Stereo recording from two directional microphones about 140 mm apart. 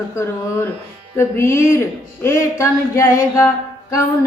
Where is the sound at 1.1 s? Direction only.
20° left (ahead or behind).